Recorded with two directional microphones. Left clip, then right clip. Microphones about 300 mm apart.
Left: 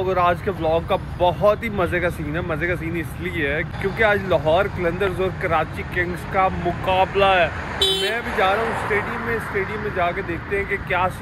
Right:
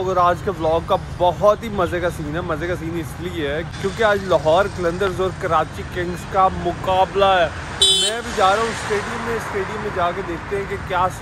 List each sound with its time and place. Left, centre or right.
0.0 s speech: centre
7.8 s vehicle: left
8.1 s speech: centre
10.9 s speech: centre